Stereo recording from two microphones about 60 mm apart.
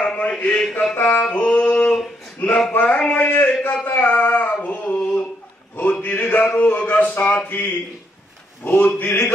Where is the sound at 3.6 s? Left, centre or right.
Left.